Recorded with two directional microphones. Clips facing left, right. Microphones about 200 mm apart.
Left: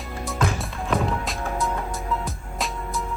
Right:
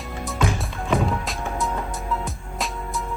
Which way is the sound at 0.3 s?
Centre (ahead or behind).